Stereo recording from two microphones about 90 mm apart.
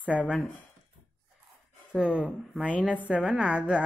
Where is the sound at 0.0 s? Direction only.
15° right (ahead or behind).